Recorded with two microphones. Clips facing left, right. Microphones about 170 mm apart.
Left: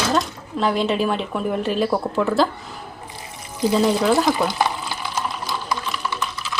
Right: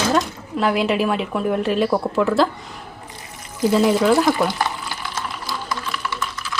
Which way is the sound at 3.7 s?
Centre (ahead or behind).